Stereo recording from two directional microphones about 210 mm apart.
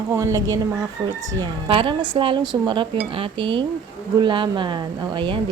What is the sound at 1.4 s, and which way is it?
A woman's voice, 25° right (ahead or behind).